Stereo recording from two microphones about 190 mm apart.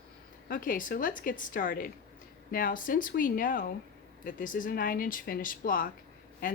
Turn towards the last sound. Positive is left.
turn(degrees=45)  # may be behind; listen again after turning